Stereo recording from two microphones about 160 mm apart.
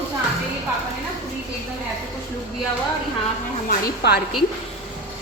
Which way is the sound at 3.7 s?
90° left.